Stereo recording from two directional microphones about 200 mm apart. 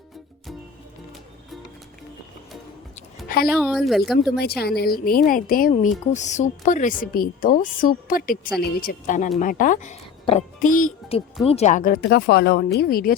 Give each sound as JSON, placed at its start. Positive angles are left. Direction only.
{"t": 3.2, "sound": "a sound", "side_deg": 50}
{"t": 3.6, "sound": "speech", "side_deg": 0}
{"t": 4.4, "sound": "speech", "side_deg": 50}